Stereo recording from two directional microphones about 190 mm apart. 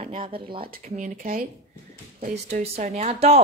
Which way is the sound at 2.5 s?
35° right (ahead or behind).